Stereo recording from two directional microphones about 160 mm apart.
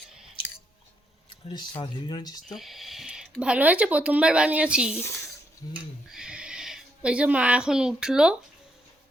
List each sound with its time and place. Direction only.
1.3 s speech: 30° left (ahead or behind)
2.6 s a woman's voice: centre (ahead or behind)
4.9 s speech: 15° left (ahead or behind)
6.1 s a sound: 5° right (ahead or behind)